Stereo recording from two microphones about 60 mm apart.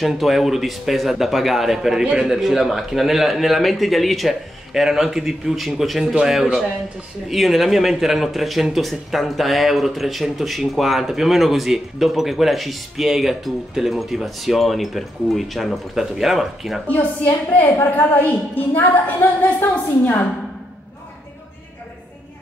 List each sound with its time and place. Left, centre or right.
0.0 s speech: centre
16.8 s a woman's voice: left